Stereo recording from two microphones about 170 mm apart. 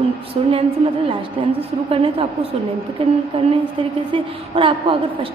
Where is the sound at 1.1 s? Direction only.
35° right (ahead or behind).